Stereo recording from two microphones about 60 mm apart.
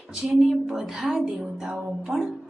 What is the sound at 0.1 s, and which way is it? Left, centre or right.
Speech, centre.